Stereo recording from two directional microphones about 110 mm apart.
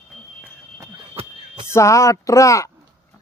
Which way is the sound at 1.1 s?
60° right (ahead or behind).